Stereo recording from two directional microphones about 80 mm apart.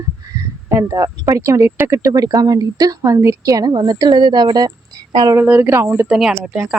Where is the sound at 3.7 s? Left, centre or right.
Right.